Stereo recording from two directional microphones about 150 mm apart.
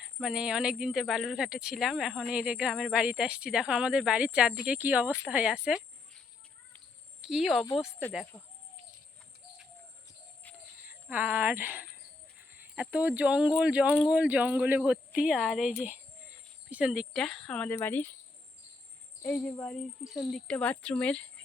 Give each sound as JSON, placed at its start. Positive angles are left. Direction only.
{"t": 0.2, "sound": "speech", "side_deg": -5}
{"t": 7.2, "sound": "speech", "side_deg": -5}
{"t": 7.9, "sound": "speech", "side_deg": 15}
{"t": 10.8, "sound": "speech", "side_deg": -10}
{"t": 19.2, "sound": "speech", "side_deg": 10}